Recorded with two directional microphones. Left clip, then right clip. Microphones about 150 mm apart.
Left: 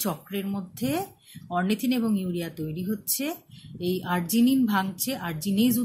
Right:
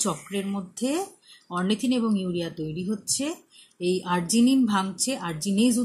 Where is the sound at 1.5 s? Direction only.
25° left (ahead or behind).